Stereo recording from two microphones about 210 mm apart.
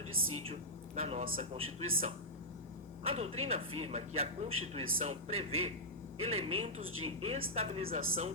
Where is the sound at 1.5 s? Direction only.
75° right (ahead or behind).